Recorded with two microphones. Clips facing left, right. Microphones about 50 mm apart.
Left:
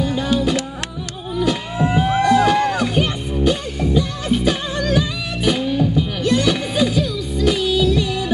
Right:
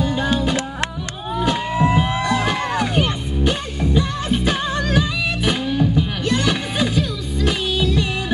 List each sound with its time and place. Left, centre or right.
0.0 s music: right